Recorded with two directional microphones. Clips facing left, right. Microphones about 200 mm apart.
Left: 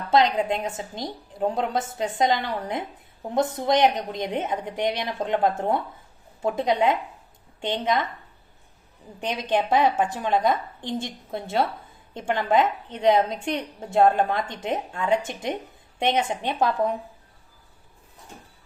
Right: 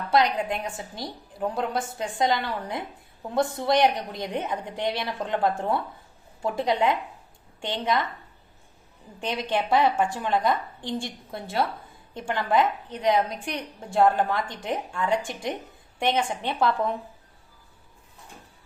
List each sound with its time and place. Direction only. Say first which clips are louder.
0.1 s a woman's voice: left 3 dB; 25° left (ahead or behind)
9.2 s a woman's voice: left 2 dB; 20° left (ahead or behind)